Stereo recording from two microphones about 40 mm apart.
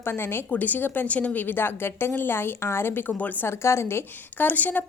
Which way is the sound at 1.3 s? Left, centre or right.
Left.